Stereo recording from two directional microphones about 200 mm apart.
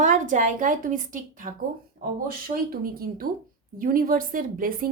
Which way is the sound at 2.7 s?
45° right (ahead or behind).